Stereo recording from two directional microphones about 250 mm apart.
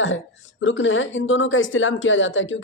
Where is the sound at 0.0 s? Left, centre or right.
Left.